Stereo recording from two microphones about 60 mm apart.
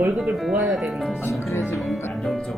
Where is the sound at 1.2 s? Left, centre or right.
Left.